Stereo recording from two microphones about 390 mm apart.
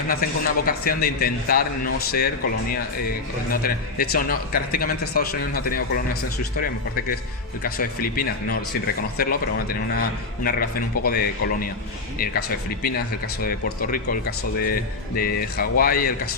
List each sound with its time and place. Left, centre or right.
0.1 s a man's voice: left
7.6 s a man's voice: left